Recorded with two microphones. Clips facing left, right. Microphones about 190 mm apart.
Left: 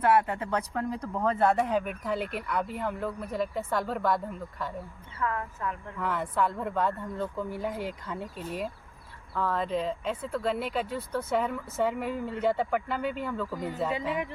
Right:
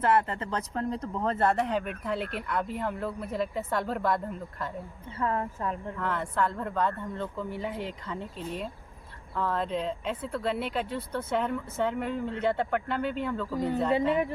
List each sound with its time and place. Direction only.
0.0 s speech: 5° left (ahead or behind)
5.2 s speech: 30° right (ahead or behind)
6.0 s speech: 5° left (ahead or behind)